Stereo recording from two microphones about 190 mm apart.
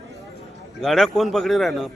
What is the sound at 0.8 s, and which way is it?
A man's voice, centre (ahead or behind).